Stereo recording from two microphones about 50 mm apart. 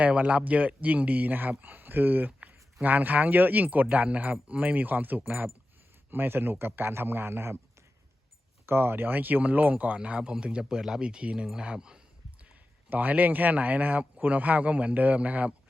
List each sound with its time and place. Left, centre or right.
0.0 s a man's voice: right
8.6 s speech: right; by 12.0 s centre
12.9 s speech: right